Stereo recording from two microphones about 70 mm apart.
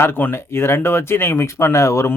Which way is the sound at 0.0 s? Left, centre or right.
Left.